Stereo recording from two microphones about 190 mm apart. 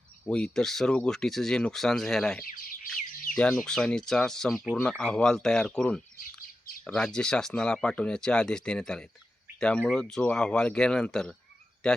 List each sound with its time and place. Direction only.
0.3 s speech: 5° left (ahead or behind)
2.4 s chirp: 50° left (ahead or behind)
3.3 s speech: 5° left (ahead or behind)